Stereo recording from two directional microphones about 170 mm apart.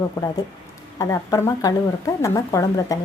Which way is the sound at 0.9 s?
20° left (ahead or behind).